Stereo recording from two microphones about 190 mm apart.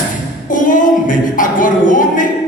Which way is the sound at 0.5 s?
45° left (ahead or behind).